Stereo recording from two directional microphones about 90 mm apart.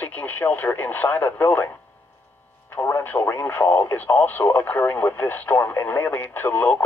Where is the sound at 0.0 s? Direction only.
20° left (ahead or behind).